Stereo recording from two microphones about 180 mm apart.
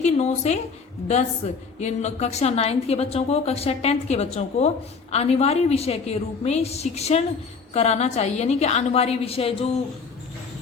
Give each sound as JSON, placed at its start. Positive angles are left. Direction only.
{"t": 0.0, "sound": "a woman's voice", "side_deg": 40}
{"t": 1.8, "sound": "a woman's voice", "side_deg": 40}